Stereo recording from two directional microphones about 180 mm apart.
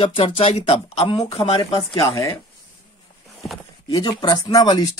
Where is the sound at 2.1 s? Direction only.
20° left (ahead or behind).